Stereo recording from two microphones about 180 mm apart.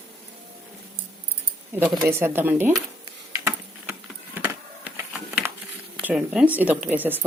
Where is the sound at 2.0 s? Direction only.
15° right (ahead or behind).